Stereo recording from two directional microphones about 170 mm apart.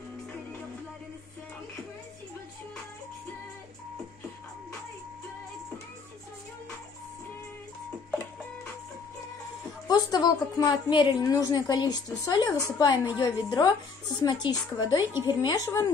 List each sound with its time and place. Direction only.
9.8 s a woman's voice: 25° left (ahead or behind)